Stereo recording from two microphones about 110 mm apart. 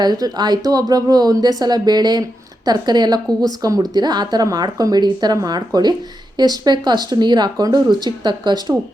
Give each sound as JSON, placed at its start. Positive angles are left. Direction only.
{"t": 0.0, "sound": "speech", "side_deg": -40}